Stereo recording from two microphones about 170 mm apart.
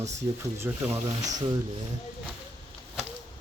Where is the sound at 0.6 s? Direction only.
10° right (ahead or behind).